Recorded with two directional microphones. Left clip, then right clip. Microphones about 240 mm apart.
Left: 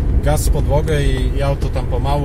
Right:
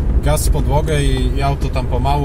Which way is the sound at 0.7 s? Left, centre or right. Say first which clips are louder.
Right 1 dB; right.